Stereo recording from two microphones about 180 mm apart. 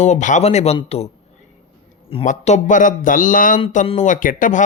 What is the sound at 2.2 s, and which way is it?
A man's voice, 40° left (ahead or behind).